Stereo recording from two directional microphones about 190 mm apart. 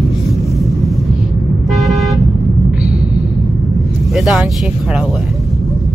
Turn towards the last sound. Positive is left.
turn(degrees=0)  # may be behind; listen again after turning